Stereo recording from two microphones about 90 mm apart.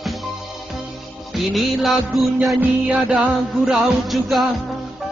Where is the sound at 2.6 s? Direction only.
15° right (ahead or behind).